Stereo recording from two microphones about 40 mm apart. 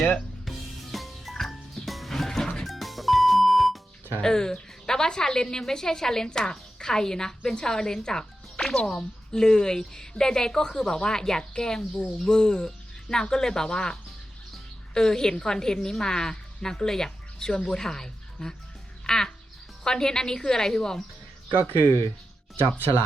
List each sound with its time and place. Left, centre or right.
0.4 s music: centre
4.2 s a woman's voice: centre
14.9 s a woman's voice: centre
19.0 s music: centre
19.8 s a woman's voice: centre
21.5 s speech: right